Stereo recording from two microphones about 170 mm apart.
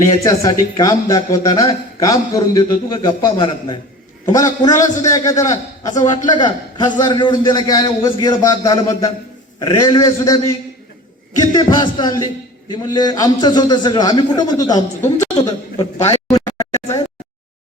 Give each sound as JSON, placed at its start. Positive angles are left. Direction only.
{"t": 0.1, "sound": "a man's voice", "side_deg": 25}
{"t": 11.5, "sound": "a man's voice", "side_deg": 25}
{"t": 16.3, "sound": "a sound", "side_deg": 20}